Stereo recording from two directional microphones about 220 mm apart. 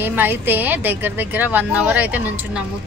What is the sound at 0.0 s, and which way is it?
A woman's voice, 10° right (ahead or behind).